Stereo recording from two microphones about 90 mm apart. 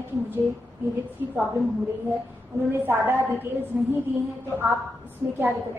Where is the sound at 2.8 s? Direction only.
25° right (ahead or behind).